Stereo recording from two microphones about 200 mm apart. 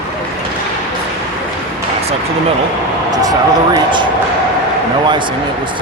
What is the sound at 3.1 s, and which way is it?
Speech, 20° right (ahead or behind).